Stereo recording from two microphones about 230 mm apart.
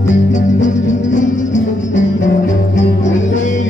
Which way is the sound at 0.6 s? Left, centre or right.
Left.